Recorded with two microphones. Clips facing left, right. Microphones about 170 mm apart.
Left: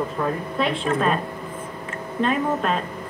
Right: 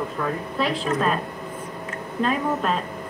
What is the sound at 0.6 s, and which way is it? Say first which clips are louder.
Speech: left 1 dB; centre (ahead or behind).